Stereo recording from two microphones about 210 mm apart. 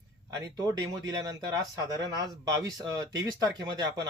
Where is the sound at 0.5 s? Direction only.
15° right (ahead or behind).